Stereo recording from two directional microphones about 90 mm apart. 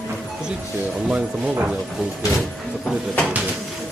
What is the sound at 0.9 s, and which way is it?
Speech, 5° right (ahead or behind).